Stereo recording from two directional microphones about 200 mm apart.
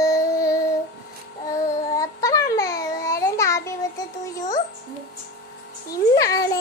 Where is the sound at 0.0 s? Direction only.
15° left (ahead or behind).